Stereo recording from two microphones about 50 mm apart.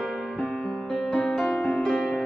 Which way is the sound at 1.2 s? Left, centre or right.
Centre.